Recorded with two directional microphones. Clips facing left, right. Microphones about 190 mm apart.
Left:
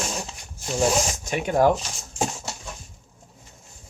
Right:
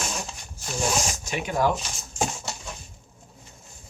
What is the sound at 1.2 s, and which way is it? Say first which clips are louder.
Speech: left 6 dB; 50° left (ahead or behind).